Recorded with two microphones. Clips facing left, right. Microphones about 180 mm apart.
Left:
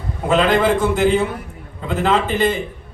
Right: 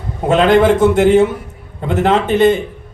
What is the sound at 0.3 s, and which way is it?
A man's voice, 60° right (ahead or behind).